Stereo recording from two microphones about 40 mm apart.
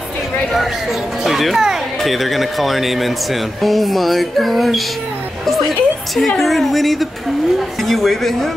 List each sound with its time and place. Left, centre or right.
1.2 s a woman's voice: centre